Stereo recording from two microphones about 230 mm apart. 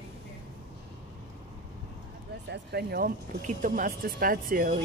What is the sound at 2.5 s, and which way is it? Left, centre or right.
A woman's voice, right.